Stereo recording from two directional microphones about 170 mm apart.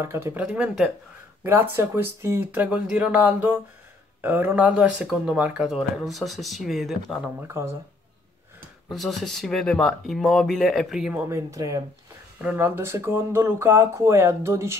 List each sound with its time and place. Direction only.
0.0 s speech: 15° right (ahead or behind)
7.4 s speech: 15° right (ahead or behind)
8.9 s speech: centre (ahead or behind); by 14.8 s 15° right (ahead or behind)